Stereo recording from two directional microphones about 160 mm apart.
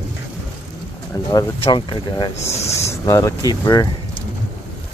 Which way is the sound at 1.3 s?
25° left (ahead or behind).